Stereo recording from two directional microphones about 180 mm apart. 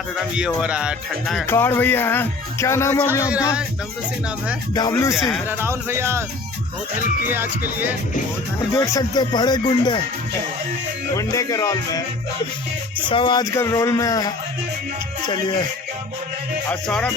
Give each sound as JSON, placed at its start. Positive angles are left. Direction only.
{"t": 0.3, "sound": "speech", "side_deg": -5}
{"t": 1.5, "sound": "speech", "side_deg": 10}
{"t": 4.7, "sound": "speech", "side_deg": 20}
{"t": 5.1, "sound": "speech", "side_deg": 0}
{"t": 5.5, "sound": "speech", "side_deg": -15}
{"t": 7.3, "sound": "speech", "side_deg": -10}
{"t": 8.7, "sound": "speech", "side_deg": 20}
{"t": 11.1, "sound": "speech", "side_deg": 15}
{"t": 13.1, "sound": "speech", "side_deg": 25}
{"t": 16.6, "sound": "speech", "side_deg": 10}